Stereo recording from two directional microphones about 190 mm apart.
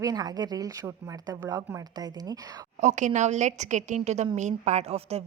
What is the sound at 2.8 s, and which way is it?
A woman's voice, 40° right (ahead or behind).